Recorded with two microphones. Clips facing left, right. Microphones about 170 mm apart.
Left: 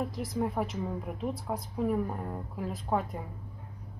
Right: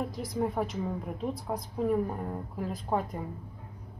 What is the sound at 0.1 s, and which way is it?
A woman's voice, centre (ahead or behind).